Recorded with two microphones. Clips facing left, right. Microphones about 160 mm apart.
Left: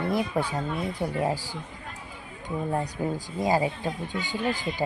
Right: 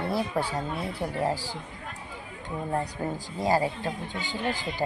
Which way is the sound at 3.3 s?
15° left (ahead or behind).